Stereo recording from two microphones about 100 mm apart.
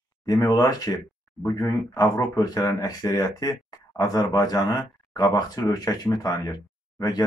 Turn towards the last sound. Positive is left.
turn(degrees=40)  # may be behind; listen again after turning